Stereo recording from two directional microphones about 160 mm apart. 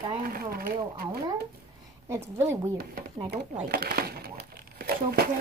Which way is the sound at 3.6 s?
70° right (ahead or behind).